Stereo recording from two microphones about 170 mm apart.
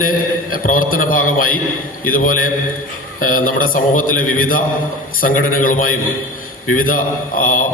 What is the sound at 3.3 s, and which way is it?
A man's voice, 55° left (ahead or behind).